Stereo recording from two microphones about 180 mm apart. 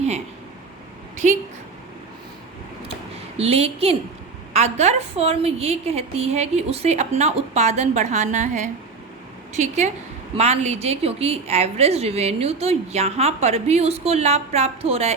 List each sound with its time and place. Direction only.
3.3 s a woman's voice: 35° right (ahead or behind)